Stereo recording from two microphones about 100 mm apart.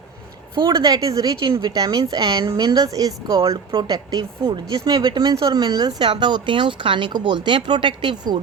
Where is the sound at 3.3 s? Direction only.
65° right (ahead or behind).